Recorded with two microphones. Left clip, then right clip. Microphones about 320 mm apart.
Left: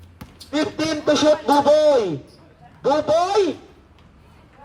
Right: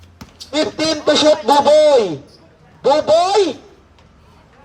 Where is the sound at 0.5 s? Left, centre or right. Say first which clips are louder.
Right 5 dB; right.